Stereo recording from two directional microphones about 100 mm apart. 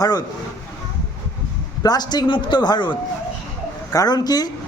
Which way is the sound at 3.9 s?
40° left (ahead or behind).